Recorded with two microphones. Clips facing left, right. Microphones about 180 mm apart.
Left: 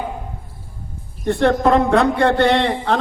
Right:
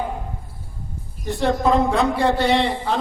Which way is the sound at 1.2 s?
60° left (ahead or behind).